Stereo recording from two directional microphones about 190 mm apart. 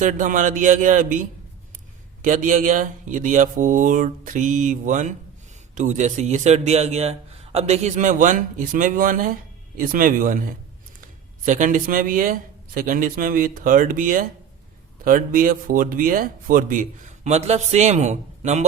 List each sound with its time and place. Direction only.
0.0 s a man's voice: 40° right (ahead or behind)